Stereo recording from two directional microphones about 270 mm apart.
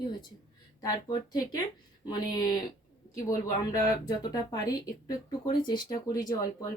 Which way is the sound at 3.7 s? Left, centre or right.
Centre.